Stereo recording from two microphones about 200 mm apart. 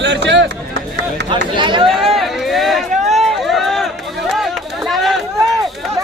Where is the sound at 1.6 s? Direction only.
25° right (ahead or behind).